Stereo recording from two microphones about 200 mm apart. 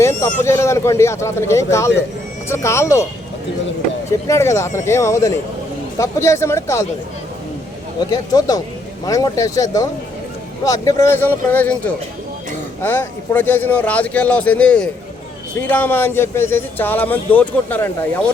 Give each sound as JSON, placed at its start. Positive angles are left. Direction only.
{"t": 0.0, "sound": "speech", "side_deg": 15}
{"t": 4.3, "sound": "speech", "side_deg": 15}
{"t": 8.1, "sound": "speech", "side_deg": 20}